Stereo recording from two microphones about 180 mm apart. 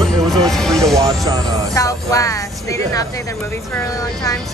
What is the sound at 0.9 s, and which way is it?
Vehicle, 20° right (ahead or behind).